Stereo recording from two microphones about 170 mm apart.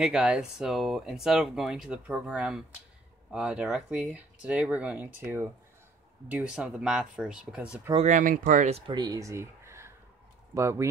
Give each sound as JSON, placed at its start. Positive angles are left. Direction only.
{"t": 0.0, "sound": "speech", "side_deg": -5}
{"t": 7.9, "sound": "speech", "side_deg": -45}
{"t": 8.9, "sound": "speech", "side_deg": -25}